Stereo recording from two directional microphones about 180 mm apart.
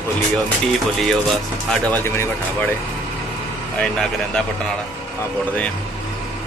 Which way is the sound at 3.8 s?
5° left (ahead or behind).